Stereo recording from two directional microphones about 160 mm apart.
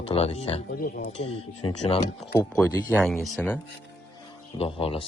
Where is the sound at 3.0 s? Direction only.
Centre (ahead or behind).